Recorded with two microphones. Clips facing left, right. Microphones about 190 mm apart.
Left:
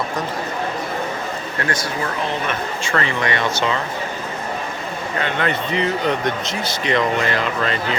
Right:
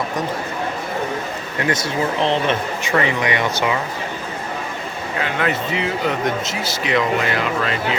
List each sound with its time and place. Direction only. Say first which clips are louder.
1.5 s speech: right 4 dB; 20° right (ahead or behind)
5.2 s speech: right 1 dB; 5° right (ahead or behind)